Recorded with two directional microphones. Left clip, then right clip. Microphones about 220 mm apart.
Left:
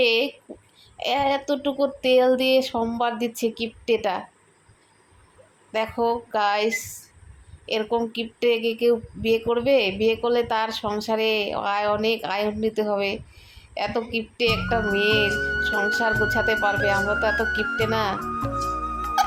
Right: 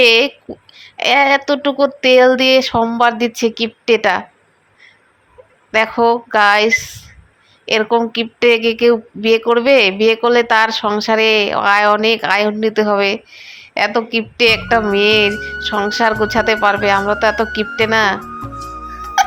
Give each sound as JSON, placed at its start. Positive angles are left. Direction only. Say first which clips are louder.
{"t": 0.0, "sound": "speech", "louder": "right 10 dB", "side_deg": -15}
{"t": 5.7, "sound": "speech", "louder": "right 11 dB", "side_deg": -20}
{"t": 15.3, "sound": "speech", "louder": "right 2 dB", "side_deg": 0}
{"t": 15.9, "sound": "speech", "louder": "right 7 dB", "side_deg": -20}
{"t": 18.2, "sound": "music", "louder": "left 1 dB", "side_deg": 0}